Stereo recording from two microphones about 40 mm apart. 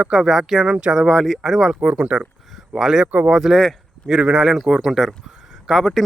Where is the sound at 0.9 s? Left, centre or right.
Centre.